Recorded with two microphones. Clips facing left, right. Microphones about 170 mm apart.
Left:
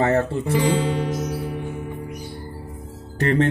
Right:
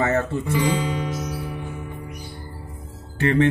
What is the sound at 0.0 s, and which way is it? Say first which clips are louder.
Speech: left 2 dB; 30° left (ahead or behind).